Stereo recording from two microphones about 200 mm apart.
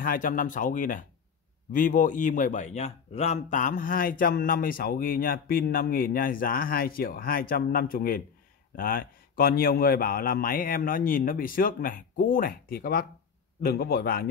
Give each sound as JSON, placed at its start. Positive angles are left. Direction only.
{"t": 0.0, "sound": "a man's voice", "side_deg": 45}